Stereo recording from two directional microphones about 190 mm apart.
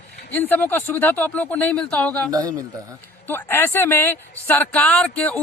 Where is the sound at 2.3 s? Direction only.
20° right (ahead or behind).